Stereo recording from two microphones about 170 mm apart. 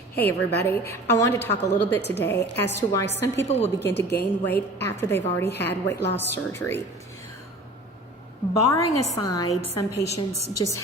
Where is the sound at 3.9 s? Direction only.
85° left.